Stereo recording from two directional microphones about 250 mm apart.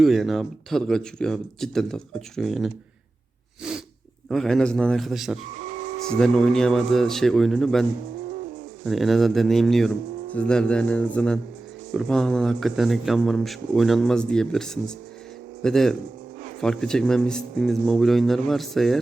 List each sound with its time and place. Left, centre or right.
0.0 s speech: centre
3.6 s sneeze: centre
4.3 s speech: centre
5.5 s a sound: right
6.1 s speech: centre